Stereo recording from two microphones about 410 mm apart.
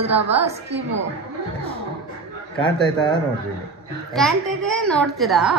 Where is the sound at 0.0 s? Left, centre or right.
Centre.